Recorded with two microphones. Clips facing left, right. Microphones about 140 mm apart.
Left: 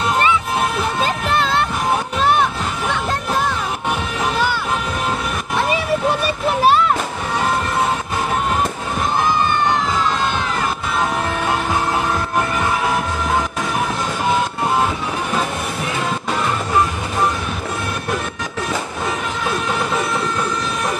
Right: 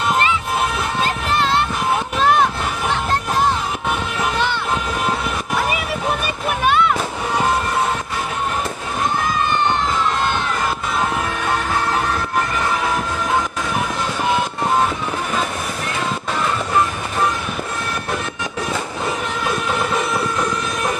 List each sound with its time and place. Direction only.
6.6 s music: 40° left (ahead or behind)